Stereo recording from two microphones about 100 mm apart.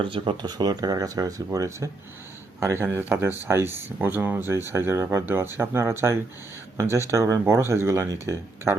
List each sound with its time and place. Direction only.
0.0 s speech: 65° right (ahead or behind)
0.4 s speech: 45° right (ahead or behind); by 8.8 s 30° right (ahead or behind)